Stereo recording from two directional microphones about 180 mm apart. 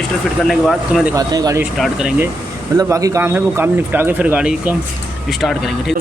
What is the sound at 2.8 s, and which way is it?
A man's voice, 20° right (ahead or behind).